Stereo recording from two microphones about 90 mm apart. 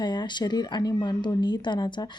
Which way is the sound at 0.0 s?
55° left (ahead or behind).